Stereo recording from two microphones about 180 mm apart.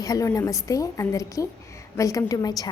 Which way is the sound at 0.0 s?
20° left (ahead or behind).